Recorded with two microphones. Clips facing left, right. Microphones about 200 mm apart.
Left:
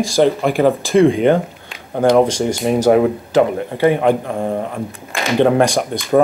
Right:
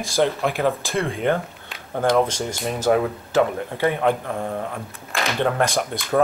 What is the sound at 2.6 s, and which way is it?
Speech, 15° left (ahead or behind).